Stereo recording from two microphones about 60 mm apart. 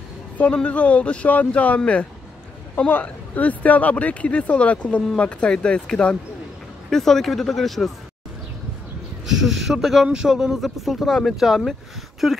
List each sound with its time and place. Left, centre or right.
0.6 s speech: left
6.9 s speech: centre
9.2 s speech: centre